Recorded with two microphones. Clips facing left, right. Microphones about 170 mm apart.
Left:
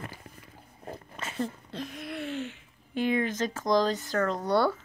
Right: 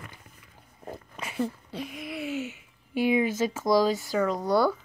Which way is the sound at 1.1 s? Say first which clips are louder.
Right 3 dB; 10° right (ahead or behind).